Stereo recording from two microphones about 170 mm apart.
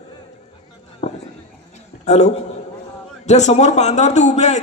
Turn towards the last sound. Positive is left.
turn(degrees=45)  # may be behind; listen again after turning